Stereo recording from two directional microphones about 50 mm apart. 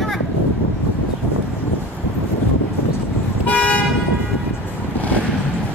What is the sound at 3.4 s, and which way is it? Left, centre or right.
Toot, left.